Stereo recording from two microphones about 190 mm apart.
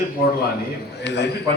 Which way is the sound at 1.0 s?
65° left (ahead or behind).